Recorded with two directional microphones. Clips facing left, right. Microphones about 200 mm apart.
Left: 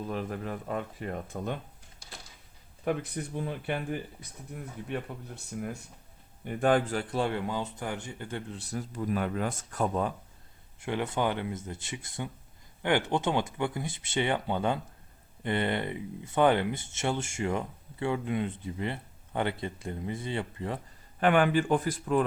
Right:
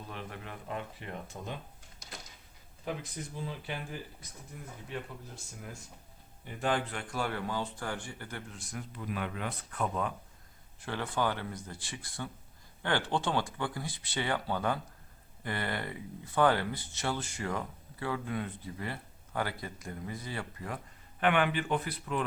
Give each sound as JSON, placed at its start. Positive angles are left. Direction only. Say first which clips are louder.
{"t": 0.1, "sound": "speech", "louder": "left 7 dB", "side_deg": 40}
{"t": 2.8, "sound": "speech", "louder": "left 7 dB", "side_deg": 60}
{"t": 6.9, "sound": "speech", "louder": "left 6 dB", "side_deg": 30}
{"t": 10.8, "sound": "speech", "louder": "left 3 dB", "side_deg": 20}
{"t": 21.2, "sound": "speech", "louder": "left 5 dB", "side_deg": 40}